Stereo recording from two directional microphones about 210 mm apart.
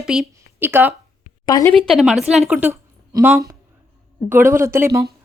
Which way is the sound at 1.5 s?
15° left (ahead or behind).